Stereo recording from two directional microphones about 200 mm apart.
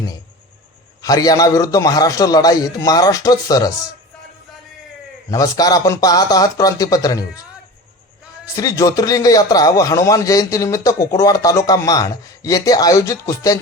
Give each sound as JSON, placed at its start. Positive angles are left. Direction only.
{"t": 1.0, "sound": "speech", "side_deg": 20}
{"t": 5.3, "sound": "speech", "side_deg": 20}
{"t": 8.5, "sound": "speech", "side_deg": 15}